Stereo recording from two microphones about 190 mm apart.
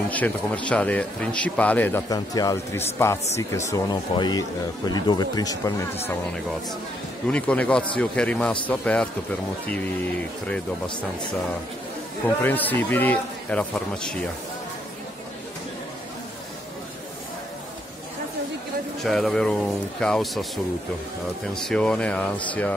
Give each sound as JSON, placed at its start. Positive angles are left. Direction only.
{"t": 0.1, "sound": "a man's voice", "side_deg": 10}
{"t": 7.2, "sound": "a man's voice", "side_deg": 5}
{"t": 12.4, "sound": "a man's voice", "side_deg": 10}
{"t": 19.0, "sound": "speech", "side_deg": 0}
{"t": 21.6, "sound": "a man's voice", "side_deg": 5}